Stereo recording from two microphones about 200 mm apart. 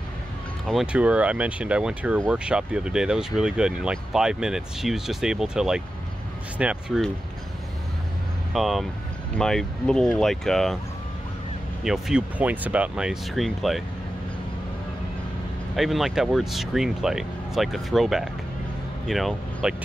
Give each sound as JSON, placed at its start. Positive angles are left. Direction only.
{"t": 0.7, "sound": "speech", "side_deg": -5}
{"t": 8.5, "sound": "speech", "side_deg": 0}
{"t": 11.8, "sound": "speech", "side_deg": -5}
{"t": 15.7, "sound": "speech", "side_deg": 0}